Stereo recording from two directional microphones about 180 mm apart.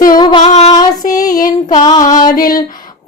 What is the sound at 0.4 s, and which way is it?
Female singing, 40° left (ahead or behind).